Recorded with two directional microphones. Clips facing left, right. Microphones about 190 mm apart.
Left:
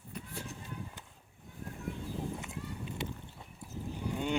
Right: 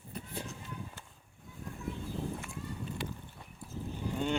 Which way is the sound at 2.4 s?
20° left (ahead or behind).